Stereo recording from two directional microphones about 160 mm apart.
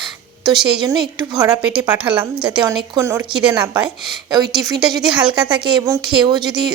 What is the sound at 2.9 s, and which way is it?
A woman's voice, 15° right (ahead or behind).